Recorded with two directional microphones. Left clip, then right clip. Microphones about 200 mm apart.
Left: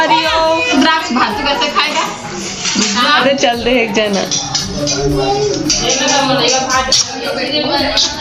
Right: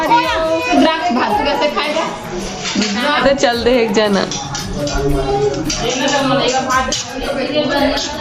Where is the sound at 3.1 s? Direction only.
5° left (ahead or behind).